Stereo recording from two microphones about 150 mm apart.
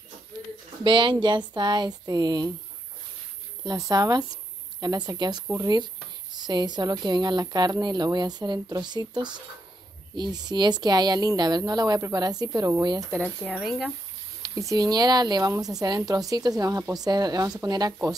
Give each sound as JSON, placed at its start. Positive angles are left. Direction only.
{"t": 0.8, "sound": "speech", "side_deg": -30}
{"t": 3.6, "sound": "a woman's voice", "side_deg": -25}
{"t": 13.5, "sound": "speech", "side_deg": 0}
{"t": 14.4, "sound": "speech", "side_deg": -20}